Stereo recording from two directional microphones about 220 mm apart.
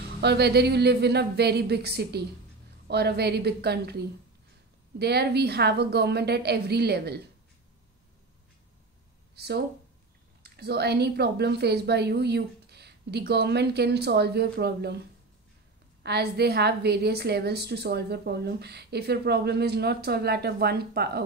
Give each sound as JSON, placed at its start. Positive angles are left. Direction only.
{"t": 0.2, "sound": "a woman's voice", "side_deg": -50}
{"t": 9.3, "sound": "a woman's voice", "side_deg": -50}
{"t": 16.0, "sound": "a woman's voice", "side_deg": -45}